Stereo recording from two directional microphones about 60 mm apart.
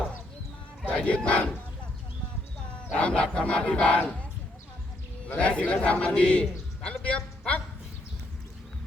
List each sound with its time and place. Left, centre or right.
0.9 s speech: left
2.9 s a sound: centre
5.4 s a man's voice: left